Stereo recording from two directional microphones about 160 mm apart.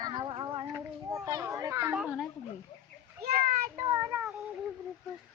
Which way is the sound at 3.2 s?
65° right (ahead or behind).